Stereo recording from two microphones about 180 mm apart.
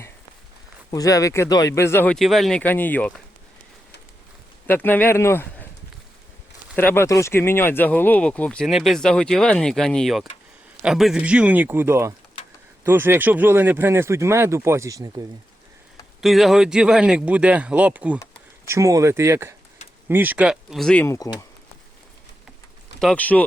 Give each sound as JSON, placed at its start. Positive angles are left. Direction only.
{"t": 0.9, "sound": "speech", "side_deg": 20}
{"t": 4.6, "sound": "speech", "side_deg": 10}
{"t": 6.7, "sound": "speech", "side_deg": 10}
{"t": 16.2, "sound": "speech", "side_deg": 0}
{"t": 21.0, "sound": "speech", "side_deg": 15}
{"t": 23.0, "sound": "speech", "side_deg": 5}